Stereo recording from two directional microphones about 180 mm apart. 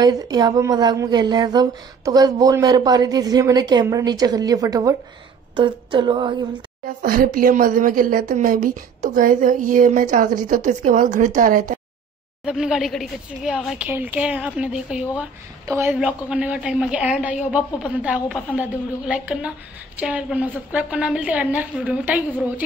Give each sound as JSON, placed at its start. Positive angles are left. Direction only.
{"t": 0.0, "sound": "speech", "side_deg": -20}
{"t": 7.0, "sound": "a woman's voice", "side_deg": -55}
{"t": 12.4, "sound": "a woman's voice", "side_deg": -5}